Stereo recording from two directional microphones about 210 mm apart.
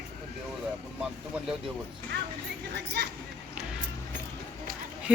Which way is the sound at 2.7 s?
50° right (ahead or behind).